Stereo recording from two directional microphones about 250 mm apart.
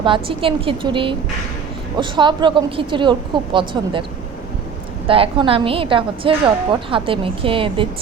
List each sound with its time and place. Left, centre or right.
0.0 s a woman's voice: right
5.0 s a woman's voice: right